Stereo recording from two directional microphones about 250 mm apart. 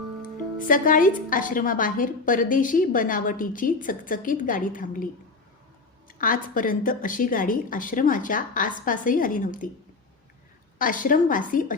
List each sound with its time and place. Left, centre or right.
0.7 s a woman's voice: left
6.1 s a woman's voice: left
10.8 s a woman's voice: left